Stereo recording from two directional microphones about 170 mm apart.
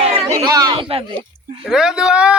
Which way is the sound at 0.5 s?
25° right (ahead or behind).